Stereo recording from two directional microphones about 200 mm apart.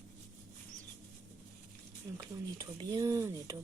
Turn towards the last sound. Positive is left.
turn(degrees=-15)  # may be behind; listen again after turning